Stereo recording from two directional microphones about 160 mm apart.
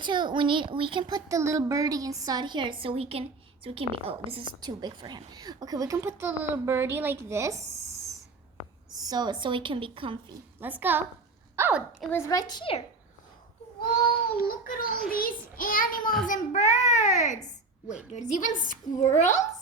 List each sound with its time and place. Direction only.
0.0 s speech: 30° right (ahead or behind)
9.0 s a woman's voice: 25° right (ahead or behind)
10.6 s a child's voice: 10° right (ahead or behind)
12.1 s a woman's voice: 25° left (ahead or behind)
14.4 s a child's voice: 65° left (ahead or behind); by 19.5 s 50° left (ahead or behind)